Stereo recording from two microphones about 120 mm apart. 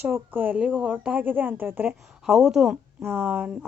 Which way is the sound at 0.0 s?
15° right (ahead or behind).